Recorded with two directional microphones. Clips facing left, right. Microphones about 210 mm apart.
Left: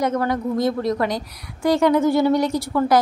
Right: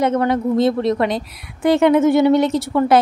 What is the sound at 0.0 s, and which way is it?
A woman's voice, 25° right (ahead or behind).